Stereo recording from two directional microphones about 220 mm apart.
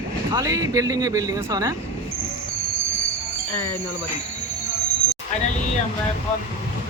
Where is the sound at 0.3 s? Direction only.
15° right (ahead or behind).